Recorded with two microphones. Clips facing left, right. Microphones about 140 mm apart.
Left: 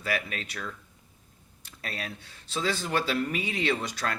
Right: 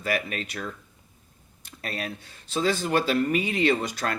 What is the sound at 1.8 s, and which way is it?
Speech, 50° right (ahead or behind).